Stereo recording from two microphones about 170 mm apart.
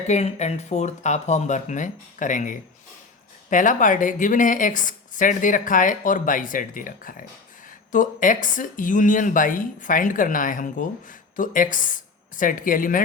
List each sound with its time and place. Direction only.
0.1 s a woman's voice: 40° left (ahead or behind)